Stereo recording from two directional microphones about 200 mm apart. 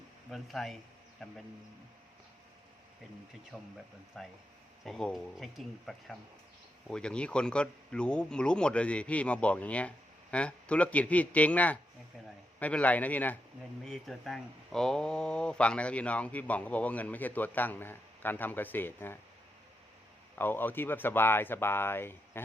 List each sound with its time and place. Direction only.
0.3 s speech: centre (ahead or behind)
3.5 s speech: centre (ahead or behind)
20.3 s speech: 10° left (ahead or behind)